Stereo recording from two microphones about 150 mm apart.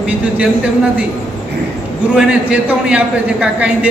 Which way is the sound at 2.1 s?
5° right (ahead or behind).